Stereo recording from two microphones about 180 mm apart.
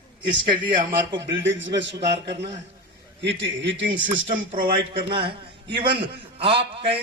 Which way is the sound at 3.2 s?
85° right.